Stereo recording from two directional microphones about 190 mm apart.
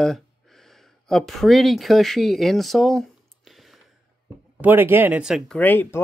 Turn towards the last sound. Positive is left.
turn(degrees=10)  # may be behind; listen again after turning